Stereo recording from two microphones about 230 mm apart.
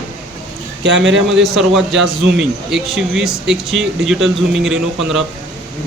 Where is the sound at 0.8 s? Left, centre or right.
Right.